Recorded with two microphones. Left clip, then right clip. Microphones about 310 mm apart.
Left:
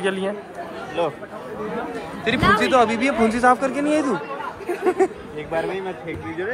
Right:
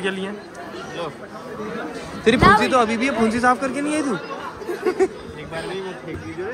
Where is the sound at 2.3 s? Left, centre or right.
Centre.